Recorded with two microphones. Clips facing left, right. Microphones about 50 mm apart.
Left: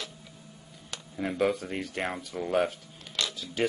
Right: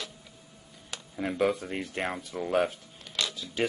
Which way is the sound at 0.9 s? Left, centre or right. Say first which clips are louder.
Even; centre.